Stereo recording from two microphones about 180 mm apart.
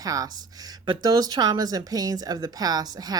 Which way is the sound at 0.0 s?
20° right (ahead or behind).